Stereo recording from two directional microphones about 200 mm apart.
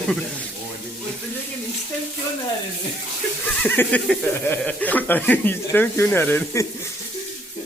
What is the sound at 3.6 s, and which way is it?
Speech, 10° left (ahead or behind).